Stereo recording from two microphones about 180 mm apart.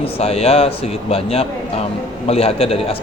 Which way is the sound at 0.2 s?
35° left (ahead or behind).